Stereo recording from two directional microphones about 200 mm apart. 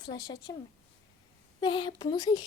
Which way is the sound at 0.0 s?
20° left (ahead or behind).